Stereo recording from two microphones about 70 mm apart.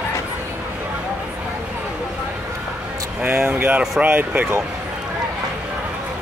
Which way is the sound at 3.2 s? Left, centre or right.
Right.